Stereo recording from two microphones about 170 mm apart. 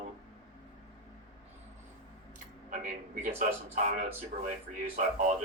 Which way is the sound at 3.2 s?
50° right (ahead or behind).